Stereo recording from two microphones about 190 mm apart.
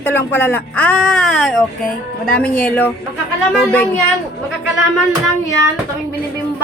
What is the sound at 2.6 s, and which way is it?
A man's voice, 10° left (ahead or behind).